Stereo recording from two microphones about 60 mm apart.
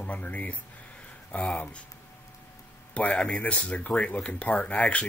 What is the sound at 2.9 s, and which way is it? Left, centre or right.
Speech, centre.